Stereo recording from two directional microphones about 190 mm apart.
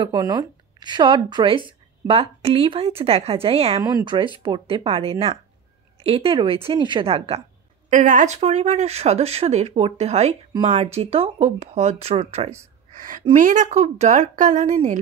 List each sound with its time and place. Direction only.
0.0 s a woman's voice: 20° right (ahead or behind)
7.9 s speech: 40° right (ahead or behind)
12.9 s a woman's voice: 45° right (ahead or behind)